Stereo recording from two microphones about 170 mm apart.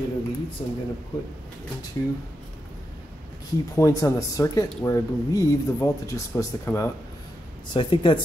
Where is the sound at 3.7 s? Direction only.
20° left (ahead or behind).